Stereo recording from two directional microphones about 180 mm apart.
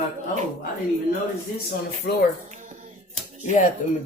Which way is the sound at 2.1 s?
65° left (ahead or behind).